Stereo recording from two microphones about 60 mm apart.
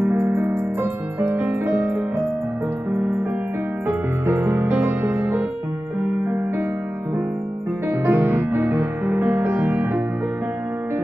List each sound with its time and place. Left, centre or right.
0.3 s music: right
3.8 s music: right
8.0 s music: right